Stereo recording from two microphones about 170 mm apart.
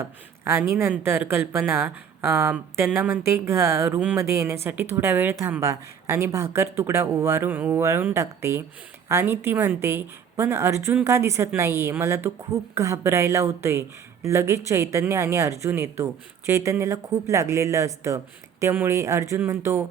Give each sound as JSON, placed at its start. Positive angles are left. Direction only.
{"t": 0.0, "sound": "speech", "side_deg": -15}